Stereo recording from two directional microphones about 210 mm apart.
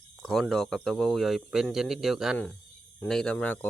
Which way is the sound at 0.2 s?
Centre (ahead or behind).